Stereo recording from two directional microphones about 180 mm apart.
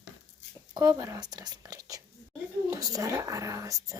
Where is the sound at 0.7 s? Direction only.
20° right (ahead or behind).